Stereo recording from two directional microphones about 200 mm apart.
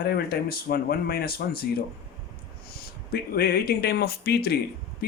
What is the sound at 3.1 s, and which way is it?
Speech, 50° left (ahead or behind).